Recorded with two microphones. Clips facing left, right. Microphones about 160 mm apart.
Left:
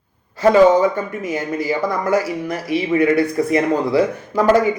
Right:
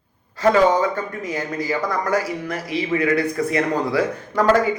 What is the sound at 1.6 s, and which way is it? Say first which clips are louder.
Speech: left 3 dB; 25° left (ahead or behind).